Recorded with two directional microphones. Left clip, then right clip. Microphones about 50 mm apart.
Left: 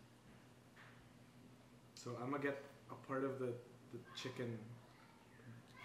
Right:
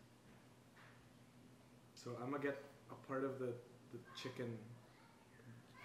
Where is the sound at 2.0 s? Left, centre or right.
Centre.